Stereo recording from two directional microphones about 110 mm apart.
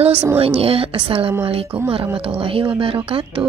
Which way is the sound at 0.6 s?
60° right (ahead or behind).